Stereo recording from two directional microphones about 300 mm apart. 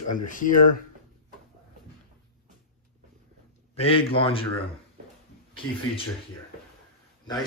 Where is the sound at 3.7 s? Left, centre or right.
Centre.